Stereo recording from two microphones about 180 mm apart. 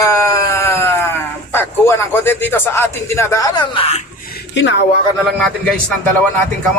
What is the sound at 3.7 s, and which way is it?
Speech, 35° left (ahead or behind).